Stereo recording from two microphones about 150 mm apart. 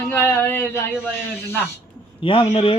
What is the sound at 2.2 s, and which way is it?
Speech, 35° left (ahead or behind).